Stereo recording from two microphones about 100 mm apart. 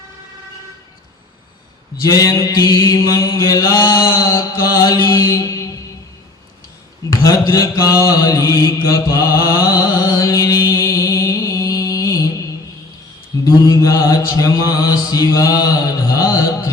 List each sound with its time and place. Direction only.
2.0 s mantra: 35° left (ahead or behind)
7.1 s mantra: 35° left (ahead or behind)
13.4 s mantra: 35° left (ahead or behind)